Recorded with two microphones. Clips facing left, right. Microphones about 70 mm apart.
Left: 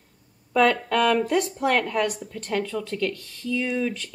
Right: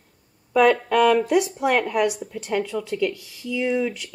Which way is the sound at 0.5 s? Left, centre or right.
Centre.